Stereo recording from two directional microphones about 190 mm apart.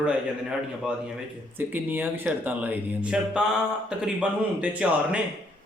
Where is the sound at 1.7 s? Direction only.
10° right (ahead or behind).